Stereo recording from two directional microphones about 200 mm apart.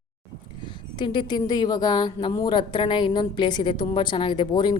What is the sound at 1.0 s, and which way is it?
A woman's voice, 25° left (ahead or behind).